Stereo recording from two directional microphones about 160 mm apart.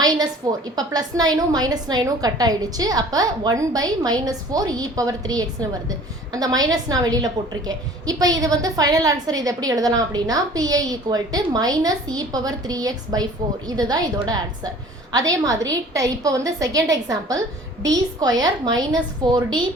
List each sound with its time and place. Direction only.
0.4 s a woman's voice: 25° right (ahead or behind)